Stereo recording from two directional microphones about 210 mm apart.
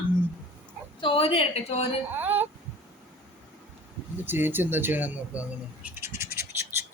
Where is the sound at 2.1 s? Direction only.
10° right (ahead or behind).